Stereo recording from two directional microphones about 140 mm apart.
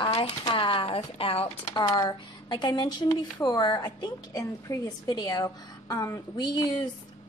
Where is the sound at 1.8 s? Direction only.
30° left (ahead or behind).